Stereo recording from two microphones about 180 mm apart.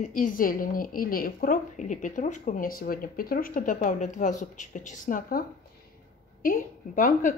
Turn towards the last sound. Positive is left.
turn(degrees=50)  # may be behind; listen again after turning